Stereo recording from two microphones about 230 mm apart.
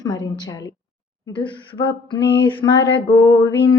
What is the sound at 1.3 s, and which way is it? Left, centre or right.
Speech, left.